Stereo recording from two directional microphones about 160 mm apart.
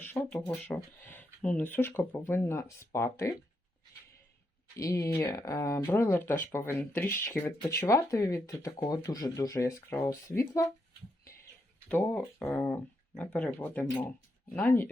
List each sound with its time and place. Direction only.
0.0 s speech: 10° left (ahead or behind)
4.8 s speech: 20° left (ahead or behind)
11.9 s speech: 10° left (ahead or behind)